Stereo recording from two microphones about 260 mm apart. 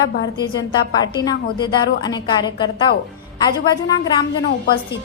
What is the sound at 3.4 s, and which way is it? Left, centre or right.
Speech, centre.